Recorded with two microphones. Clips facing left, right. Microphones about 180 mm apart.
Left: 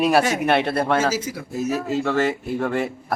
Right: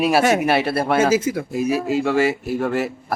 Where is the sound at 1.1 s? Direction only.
55° right (ahead or behind).